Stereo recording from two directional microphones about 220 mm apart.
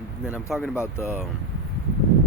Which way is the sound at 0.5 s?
Centre (ahead or behind).